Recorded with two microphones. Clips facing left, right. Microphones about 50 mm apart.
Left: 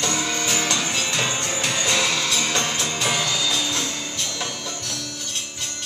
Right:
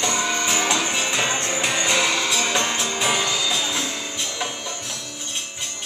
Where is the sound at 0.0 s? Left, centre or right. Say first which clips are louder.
Right 2 dB; centre.